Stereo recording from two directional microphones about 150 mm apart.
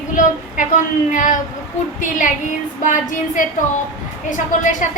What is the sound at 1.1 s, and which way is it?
Speech, 60° left (ahead or behind).